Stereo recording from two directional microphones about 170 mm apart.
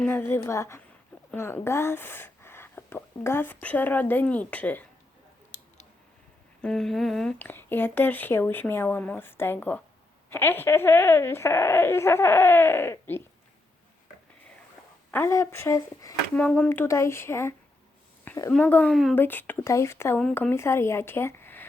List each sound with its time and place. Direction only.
0.0 s speech: 10° left (ahead or behind)
6.6 s speech: 5° left (ahead or behind)
15.1 s speech: 15° left (ahead or behind)
16.3 s speech: 10° left (ahead or behind)
18.3 s a sound: 15° left (ahead or behind)
18.5 s speech: 10° left (ahead or behind)
19.1 s speech: 10° left (ahead or behind)